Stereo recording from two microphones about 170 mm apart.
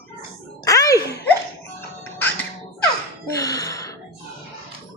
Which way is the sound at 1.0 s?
20° left (ahead or behind).